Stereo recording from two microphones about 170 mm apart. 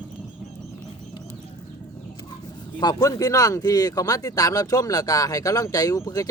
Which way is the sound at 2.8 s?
25° left (ahead or behind).